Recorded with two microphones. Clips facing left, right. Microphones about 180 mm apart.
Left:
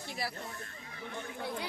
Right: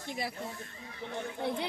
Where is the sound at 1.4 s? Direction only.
25° right (ahead or behind).